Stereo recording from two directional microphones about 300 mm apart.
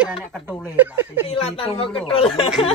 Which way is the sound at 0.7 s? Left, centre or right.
Centre.